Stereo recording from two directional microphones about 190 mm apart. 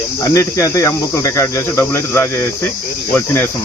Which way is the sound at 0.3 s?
15° left (ahead or behind).